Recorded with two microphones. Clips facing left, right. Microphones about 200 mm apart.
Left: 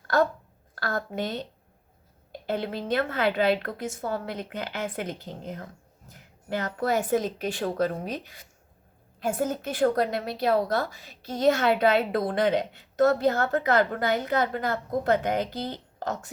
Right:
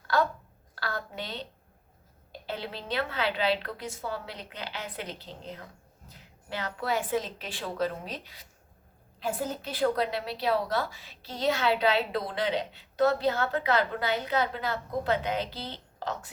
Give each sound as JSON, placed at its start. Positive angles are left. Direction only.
{"t": 0.1, "sound": "a woman's voice", "side_deg": 45}
{"t": 2.5, "sound": "a woman's voice", "side_deg": 50}